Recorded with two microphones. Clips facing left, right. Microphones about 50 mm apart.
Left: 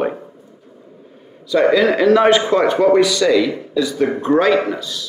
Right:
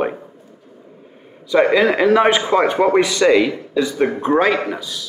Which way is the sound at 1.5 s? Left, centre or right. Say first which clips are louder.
Even; right.